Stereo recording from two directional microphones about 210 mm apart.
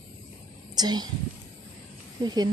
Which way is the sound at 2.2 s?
20° right (ahead or behind).